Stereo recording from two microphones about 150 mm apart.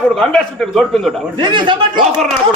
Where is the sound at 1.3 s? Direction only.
30° right (ahead or behind).